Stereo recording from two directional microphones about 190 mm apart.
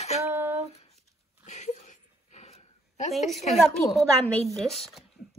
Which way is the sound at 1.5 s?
40° left (ahead or behind).